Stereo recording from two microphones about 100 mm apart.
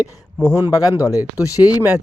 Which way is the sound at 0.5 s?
35° left (ahead or behind).